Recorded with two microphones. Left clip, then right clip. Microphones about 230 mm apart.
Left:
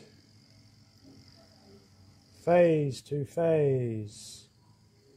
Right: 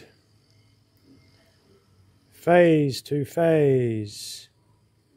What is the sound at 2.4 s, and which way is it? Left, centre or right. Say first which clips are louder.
Speech: right 6 dB; right.